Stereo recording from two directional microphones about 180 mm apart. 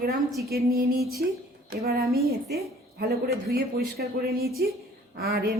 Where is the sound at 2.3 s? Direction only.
60° right (ahead or behind).